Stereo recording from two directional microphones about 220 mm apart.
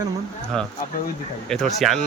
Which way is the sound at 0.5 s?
5° left (ahead or behind).